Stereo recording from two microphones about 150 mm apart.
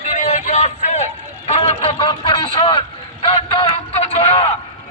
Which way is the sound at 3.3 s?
40° left (ahead or behind).